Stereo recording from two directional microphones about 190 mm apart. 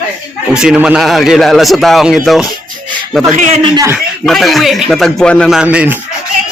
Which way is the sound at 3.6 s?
20° right (ahead or behind).